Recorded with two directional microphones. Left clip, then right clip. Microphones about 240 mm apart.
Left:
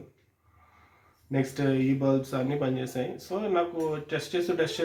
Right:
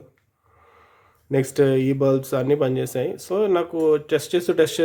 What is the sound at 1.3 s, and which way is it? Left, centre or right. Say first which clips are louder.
Speech: right 9 dB; right.